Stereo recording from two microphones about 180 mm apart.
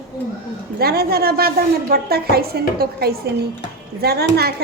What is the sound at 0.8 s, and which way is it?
A woman's voice, 60° right (ahead or behind).